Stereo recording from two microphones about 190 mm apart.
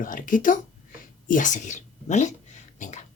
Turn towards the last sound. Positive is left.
turn(degrees=40)  # may be behind; listen again after turning